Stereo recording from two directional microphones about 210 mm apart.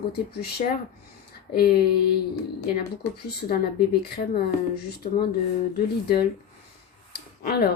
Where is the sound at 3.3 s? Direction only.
50° left (ahead or behind).